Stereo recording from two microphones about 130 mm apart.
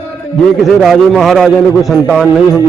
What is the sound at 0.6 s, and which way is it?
A man's voice, centre (ahead or behind).